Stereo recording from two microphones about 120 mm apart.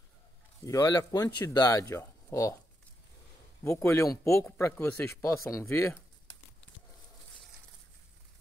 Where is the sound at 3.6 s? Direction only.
20° left (ahead or behind).